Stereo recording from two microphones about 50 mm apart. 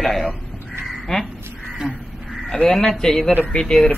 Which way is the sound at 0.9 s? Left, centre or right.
Centre.